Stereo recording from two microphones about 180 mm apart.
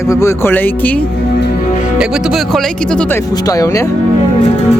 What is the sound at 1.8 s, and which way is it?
Speech, 5° right (ahead or behind).